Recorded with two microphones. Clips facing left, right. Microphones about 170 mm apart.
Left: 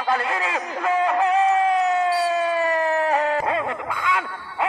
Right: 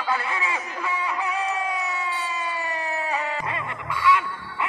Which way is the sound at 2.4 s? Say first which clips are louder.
Left 9 dB; 55° left (ahead or behind).